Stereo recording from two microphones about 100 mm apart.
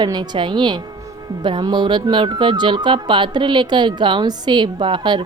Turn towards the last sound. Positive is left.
turn(degrees=-50)  # may be behind; listen again after turning